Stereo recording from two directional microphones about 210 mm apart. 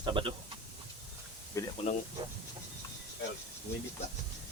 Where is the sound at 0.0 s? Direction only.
25° right (ahead or behind).